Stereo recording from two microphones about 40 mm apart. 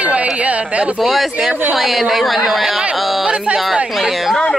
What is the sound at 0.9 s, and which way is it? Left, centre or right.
Speech, centre.